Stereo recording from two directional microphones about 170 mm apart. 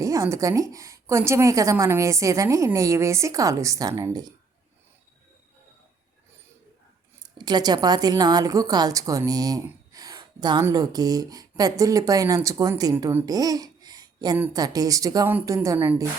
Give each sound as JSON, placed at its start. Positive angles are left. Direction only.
{"t": 0.0, "sound": "a woman's voice", "side_deg": -20}
{"t": 7.2, "sound": "a woman's voice", "side_deg": -25}
{"t": 14.3, "sound": "a woman's voice", "side_deg": -10}